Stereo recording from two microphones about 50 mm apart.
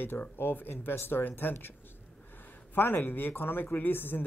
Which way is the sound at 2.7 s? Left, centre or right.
Left.